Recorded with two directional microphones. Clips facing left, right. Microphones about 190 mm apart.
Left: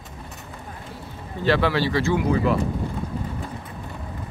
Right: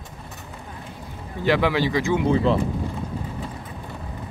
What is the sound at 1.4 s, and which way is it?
Speech, 15° right (ahead or behind).